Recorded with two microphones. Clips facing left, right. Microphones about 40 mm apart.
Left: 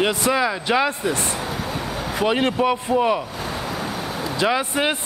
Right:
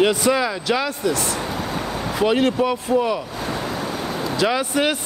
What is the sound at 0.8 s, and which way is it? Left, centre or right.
Speech, left.